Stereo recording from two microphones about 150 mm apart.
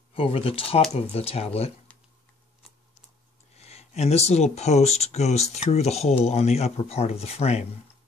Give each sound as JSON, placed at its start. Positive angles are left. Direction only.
{"t": 0.1, "sound": "speech", "side_deg": 40}
{"t": 1.9, "sound": "a sound", "side_deg": 10}
{"t": 3.5, "sound": "speech", "side_deg": 45}